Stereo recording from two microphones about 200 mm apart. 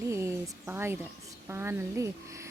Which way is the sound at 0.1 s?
15° right (ahead or behind).